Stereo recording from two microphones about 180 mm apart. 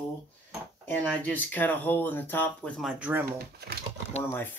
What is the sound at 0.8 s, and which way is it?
Speech, 10° left (ahead or behind).